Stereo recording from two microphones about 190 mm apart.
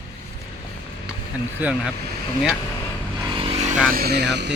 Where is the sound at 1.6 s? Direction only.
10° right (ahead or behind).